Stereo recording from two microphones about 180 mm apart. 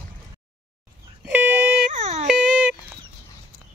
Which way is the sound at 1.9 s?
40° right (ahead or behind).